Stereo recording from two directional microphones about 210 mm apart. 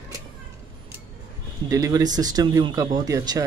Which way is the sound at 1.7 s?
15° right (ahead or behind).